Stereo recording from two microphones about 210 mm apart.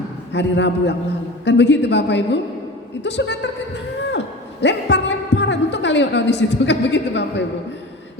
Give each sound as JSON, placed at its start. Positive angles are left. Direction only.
{"t": 0.3, "sound": "a woman's voice", "side_deg": 55}
{"t": 4.6, "sound": "a woman's voice", "side_deg": 55}